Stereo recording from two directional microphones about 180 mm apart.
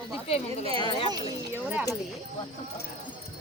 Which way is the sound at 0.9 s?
30° left (ahead or behind).